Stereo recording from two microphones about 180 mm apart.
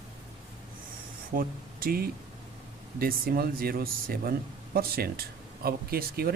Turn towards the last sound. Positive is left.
turn(degrees=-55)  # may be behind; listen again after turning